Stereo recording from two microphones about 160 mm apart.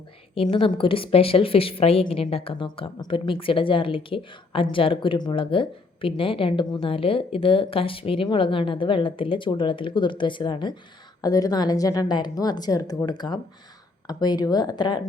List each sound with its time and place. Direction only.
0.5 s a woman's voice: 35° left (ahead or behind)